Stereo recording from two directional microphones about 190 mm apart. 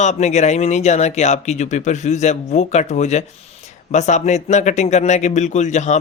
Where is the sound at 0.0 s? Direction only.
35° left (ahead or behind).